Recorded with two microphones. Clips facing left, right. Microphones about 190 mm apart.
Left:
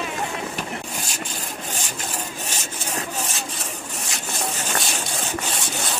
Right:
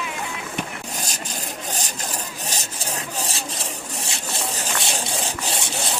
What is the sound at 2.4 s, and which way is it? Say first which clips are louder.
Rub: right 1 dB; 35° right (ahead or behind).